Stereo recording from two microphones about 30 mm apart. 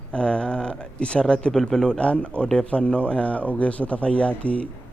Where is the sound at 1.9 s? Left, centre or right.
Left.